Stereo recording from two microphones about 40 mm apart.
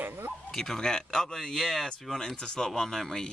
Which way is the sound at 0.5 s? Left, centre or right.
Centre.